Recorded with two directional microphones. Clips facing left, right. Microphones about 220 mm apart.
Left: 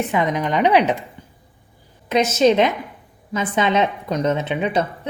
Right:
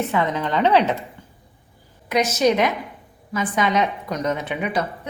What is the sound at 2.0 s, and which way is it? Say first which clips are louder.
A woman's voice: left 3 dB; 25° left (ahead or behind).